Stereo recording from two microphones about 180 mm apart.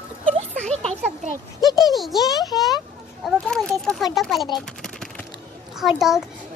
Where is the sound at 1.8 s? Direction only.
Centre (ahead or behind).